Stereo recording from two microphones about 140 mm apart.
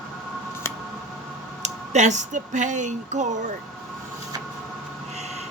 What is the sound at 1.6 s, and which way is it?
Speech, 55° right (ahead or behind).